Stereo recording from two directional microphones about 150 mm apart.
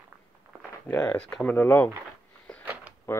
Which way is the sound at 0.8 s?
10° left (ahead or behind).